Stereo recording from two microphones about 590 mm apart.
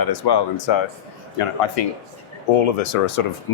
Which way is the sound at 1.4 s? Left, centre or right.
Left.